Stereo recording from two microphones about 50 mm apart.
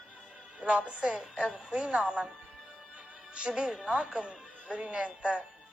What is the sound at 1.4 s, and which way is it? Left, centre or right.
Speech, centre.